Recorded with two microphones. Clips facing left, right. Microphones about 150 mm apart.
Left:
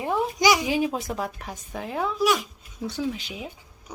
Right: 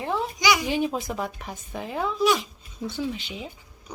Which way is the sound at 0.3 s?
40° left (ahead or behind).